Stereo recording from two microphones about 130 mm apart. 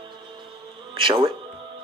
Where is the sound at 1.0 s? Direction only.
40° right (ahead or behind).